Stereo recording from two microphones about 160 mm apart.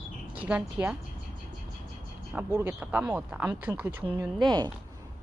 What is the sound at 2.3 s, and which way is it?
Speech, 15° right (ahead or behind).